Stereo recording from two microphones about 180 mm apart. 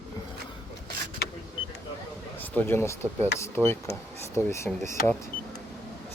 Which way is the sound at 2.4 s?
10° left (ahead or behind).